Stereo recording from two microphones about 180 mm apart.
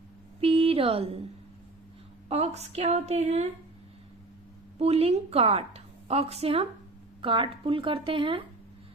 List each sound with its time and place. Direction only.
0.3 s speech: 35° right (ahead or behind)
2.3 s a woman's voice: 35° right (ahead or behind)
4.8 s a woman's voice: 35° right (ahead or behind)